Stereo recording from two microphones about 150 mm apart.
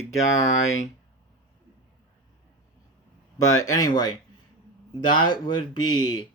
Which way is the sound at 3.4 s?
20° left (ahead or behind).